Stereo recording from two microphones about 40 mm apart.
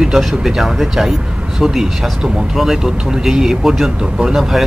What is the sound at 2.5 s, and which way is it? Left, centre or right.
Speech, centre.